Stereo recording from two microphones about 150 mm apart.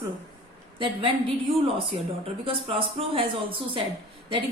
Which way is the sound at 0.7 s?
35° right (ahead or behind).